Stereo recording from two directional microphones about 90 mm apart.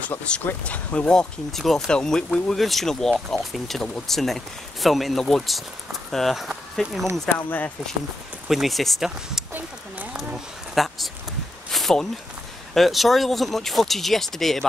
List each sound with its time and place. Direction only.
0.5 s speech: 15° left (ahead or behind)
7.2 s speech: 20° left (ahead or behind)
8.5 s speech: centre (ahead or behind)
9.5 s a sound: 20° right (ahead or behind)
10.3 s a sound: centre (ahead or behind)
12.7 s speech: centre (ahead or behind)